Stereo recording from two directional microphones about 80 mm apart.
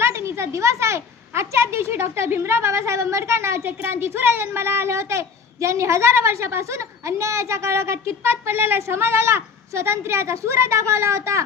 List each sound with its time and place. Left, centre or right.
0.0 s a woman's voice: right